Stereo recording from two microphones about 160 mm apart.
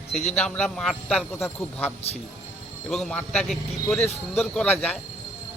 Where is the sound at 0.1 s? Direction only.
45° left (ahead or behind).